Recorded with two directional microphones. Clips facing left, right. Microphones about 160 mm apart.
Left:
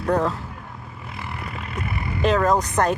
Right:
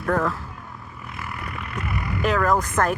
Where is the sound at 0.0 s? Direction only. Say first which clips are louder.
Left 2 dB; 20° left (ahead or behind).